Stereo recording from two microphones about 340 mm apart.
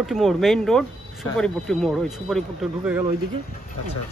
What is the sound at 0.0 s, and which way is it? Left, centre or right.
Speech, centre.